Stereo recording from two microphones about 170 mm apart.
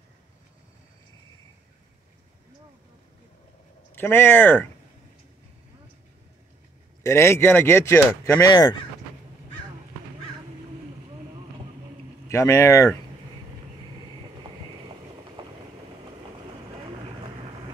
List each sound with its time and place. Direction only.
3.9 s speech: 10° left (ahead or behind)
7.0 s speech: 15° left (ahead or behind)
12.3 s speech: 15° left (ahead or behind)